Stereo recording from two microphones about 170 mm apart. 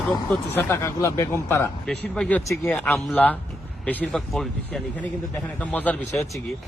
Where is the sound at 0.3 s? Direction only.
10° left (ahead or behind).